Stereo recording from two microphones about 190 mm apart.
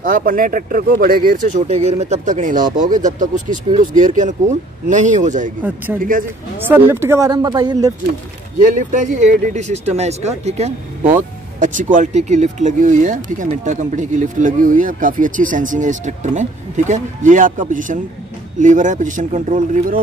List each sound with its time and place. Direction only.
0.0 s speech: 45° right (ahead or behind)
6.7 s speech: 10° right (ahead or behind)
8.5 s speech: 40° right (ahead or behind)